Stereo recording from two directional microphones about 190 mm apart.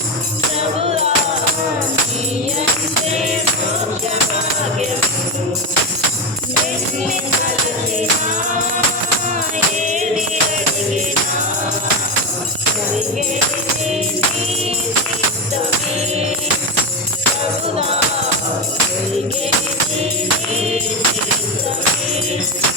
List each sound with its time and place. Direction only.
0.8 s music: 30° right (ahead or behind)
9.8 s music: 40° right (ahead or behind)